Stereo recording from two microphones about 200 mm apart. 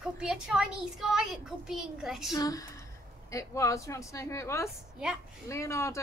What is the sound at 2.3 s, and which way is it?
A woman's voice, 15° left (ahead or behind).